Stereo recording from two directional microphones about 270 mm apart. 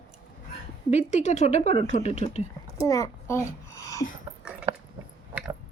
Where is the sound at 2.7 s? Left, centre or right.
Centre.